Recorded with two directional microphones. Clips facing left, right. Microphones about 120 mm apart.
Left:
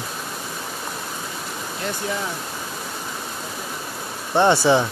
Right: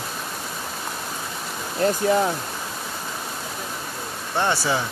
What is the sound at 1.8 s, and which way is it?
Speech, 45° right (ahead or behind).